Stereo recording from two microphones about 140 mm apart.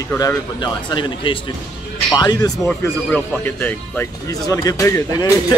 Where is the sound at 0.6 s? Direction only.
35° left (ahead or behind).